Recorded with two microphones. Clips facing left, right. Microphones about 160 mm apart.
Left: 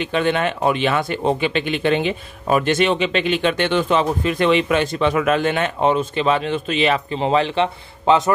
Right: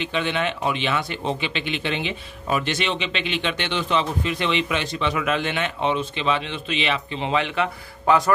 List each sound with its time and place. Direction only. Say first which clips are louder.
0.0 s a man's voice: left 5 dB; 45° left (ahead or behind); by 8.2 s 30° left (ahead or behind)